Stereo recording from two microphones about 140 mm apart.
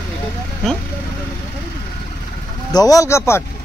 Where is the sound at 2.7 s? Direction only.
25° left (ahead or behind).